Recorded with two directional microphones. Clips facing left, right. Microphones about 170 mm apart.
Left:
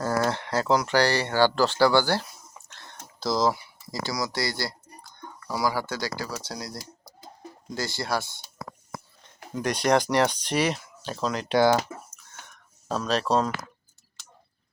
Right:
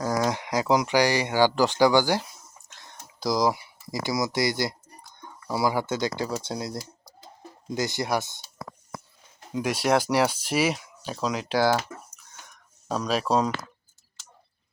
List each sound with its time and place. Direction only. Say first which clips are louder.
0.0 s speech: even; 10° right (ahead or behind)
9.5 s speech: even; 5° right (ahead or behind)